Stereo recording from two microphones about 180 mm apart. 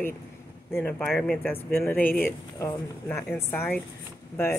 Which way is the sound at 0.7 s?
10° left (ahead or behind).